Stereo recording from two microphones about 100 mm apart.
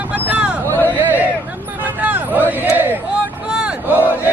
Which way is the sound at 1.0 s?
15° right (ahead or behind).